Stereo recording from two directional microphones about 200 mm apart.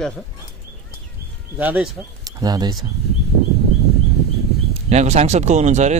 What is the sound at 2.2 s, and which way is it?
Speech, 20° right (ahead or behind).